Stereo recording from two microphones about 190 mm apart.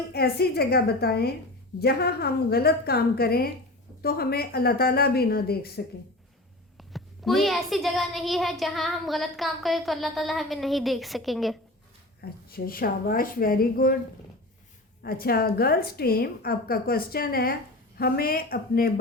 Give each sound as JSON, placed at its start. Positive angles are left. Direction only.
{"t": 0.1, "sound": "a woman's voice", "side_deg": 55}
{"t": 6.7, "sound": "a child's voice", "side_deg": 0}
{"t": 12.2, "sound": "a woman's voice", "side_deg": 50}
{"t": 15.0, "sound": "a woman's voice", "side_deg": 55}